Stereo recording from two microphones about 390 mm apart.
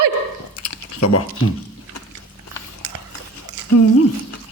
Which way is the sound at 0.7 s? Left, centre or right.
Left.